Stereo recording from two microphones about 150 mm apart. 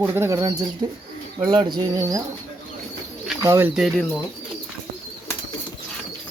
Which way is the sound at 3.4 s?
20° right (ahead or behind).